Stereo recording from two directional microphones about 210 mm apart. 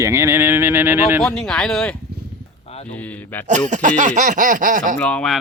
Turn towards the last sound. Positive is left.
turn(degrees=5)  # may be behind; listen again after turning